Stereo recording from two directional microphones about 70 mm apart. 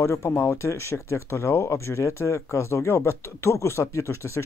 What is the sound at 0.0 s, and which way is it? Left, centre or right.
Speech, left.